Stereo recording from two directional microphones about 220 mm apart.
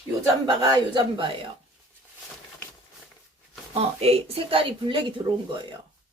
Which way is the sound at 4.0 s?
25° right (ahead or behind).